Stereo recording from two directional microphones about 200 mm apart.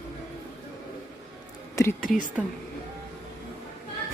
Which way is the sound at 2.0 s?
40° left (ahead or behind).